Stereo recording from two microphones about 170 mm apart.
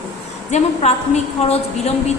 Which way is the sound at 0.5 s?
40° left (ahead or behind).